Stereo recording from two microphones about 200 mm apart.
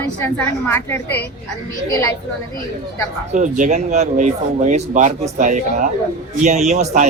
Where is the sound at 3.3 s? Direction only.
40° right (ahead or behind).